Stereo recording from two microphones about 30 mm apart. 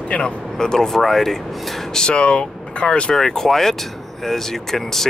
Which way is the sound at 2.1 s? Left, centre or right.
Left.